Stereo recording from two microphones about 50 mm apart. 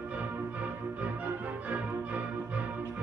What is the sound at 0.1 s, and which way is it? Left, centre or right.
Music, right.